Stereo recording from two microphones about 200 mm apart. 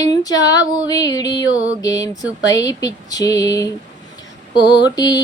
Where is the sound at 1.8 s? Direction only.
15° left (ahead or behind).